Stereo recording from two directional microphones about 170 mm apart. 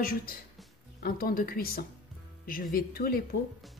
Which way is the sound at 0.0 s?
60° left (ahead or behind).